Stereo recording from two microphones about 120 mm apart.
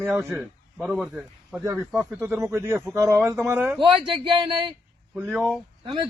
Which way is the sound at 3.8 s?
45° right (ahead or behind).